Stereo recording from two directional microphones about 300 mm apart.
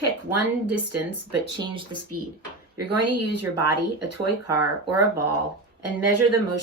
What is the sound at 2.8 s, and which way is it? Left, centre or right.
Speech, right.